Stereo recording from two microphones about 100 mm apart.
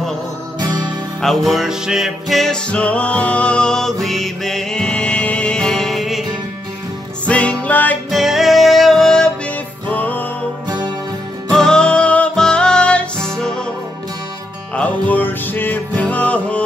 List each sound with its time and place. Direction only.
0.6 s music: 45° right (ahead or behind)
1.2 s music: centre (ahead or behind)
7.2 s music: 10° left (ahead or behind)
8.1 s music: centre (ahead or behind)
9.8 s music: 15° left (ahead or behind)
11.5 s music: 5° left (ahead or behind)
14.8 s music: 15° left (ahead or behind)